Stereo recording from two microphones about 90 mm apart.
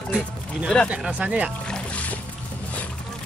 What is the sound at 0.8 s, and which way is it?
Speech, 15° right (ahead or behind).